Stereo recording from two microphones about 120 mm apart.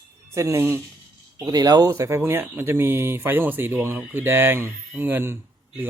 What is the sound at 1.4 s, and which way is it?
Speech, 35° right (ahead or behind).